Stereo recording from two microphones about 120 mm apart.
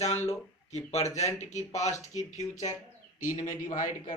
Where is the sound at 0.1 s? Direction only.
20° left (ahead or behind).